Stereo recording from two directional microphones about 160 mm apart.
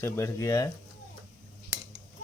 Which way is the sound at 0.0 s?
20° left (ahead or behind).